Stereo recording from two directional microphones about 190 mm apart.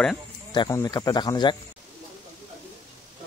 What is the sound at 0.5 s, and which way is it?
Speech, 15° left (ahead or behind).